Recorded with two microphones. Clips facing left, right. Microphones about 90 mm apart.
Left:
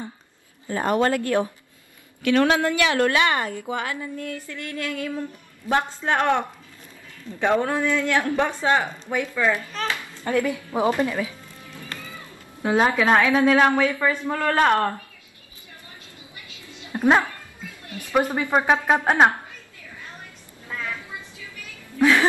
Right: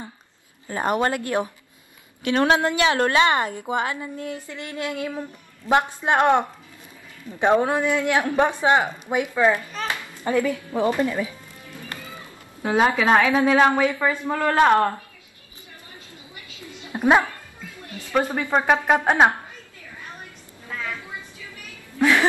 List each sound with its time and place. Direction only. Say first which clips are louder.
0.7 s a woman's voice: left 1 dB; 20° right (ahead or behind)
9.8 s a sound: right 2 dB; 15° right (ahead or behind)
10.4 s speech: even; 15° left (ahead or behind)
11.1 s music: right 1 dB; 20° right (ahead or behind)
13.2 s a woman's voice: even; 20° right (ahead or behind)
16.8 s dog: right 1 dB; 15° right (ahead or behind)
17.8 s a sound: left 2 dB; 20° right (ahead or behind)
18.1 s speech: left 1 dB; 20° left (ahead or behind)
19.0 s a woman's voice: even; centre (ahead or behind)
21.9 s speech: left 1 dB; 15° right (ahead or behind)